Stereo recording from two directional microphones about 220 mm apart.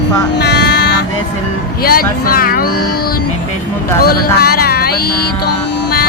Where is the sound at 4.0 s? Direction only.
45° left (ahead or behind).